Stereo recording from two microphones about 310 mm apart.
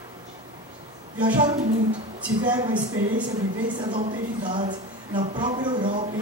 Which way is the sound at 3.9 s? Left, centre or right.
Centre.